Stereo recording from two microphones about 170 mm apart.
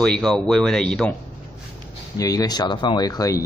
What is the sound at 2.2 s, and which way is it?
Speech, 20° left (ahead or behind).